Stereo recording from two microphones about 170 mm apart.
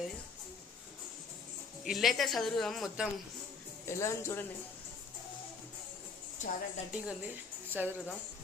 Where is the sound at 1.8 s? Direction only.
Centre (ahead or behind).